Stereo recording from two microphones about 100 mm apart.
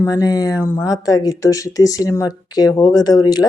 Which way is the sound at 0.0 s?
35° left (ahead or behind).